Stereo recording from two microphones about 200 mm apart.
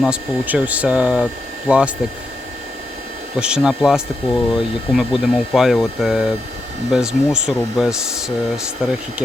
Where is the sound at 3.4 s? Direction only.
5° right (ahead or behind).